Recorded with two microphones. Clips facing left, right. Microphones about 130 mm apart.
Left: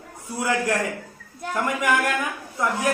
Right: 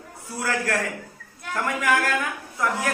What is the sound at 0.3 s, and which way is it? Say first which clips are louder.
A man's voice: left 3 dB; 20° left (ahead or behind).